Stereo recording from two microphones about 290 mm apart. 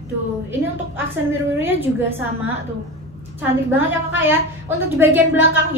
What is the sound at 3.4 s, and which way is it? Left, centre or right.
A woman's voice, centre.